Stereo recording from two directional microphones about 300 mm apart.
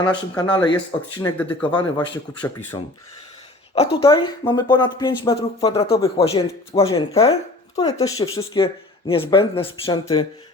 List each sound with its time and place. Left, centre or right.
0.0 s speech: centre